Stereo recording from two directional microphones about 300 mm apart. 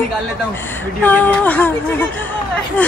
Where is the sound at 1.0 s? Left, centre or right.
Centre.